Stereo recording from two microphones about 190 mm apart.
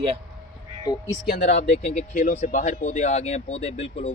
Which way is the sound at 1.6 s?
35° left (ahead or behind).